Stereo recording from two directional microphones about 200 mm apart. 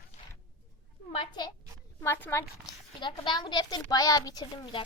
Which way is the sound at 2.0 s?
10° left (ahead or behind).